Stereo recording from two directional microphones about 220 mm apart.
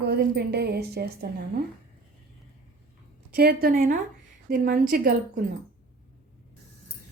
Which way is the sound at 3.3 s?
45° right (ahead or behind).